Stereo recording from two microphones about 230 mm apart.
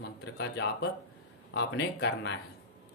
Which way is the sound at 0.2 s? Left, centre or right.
Left.